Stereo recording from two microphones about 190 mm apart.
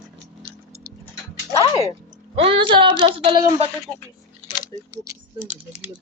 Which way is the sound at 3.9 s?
20° left (ahead or behind).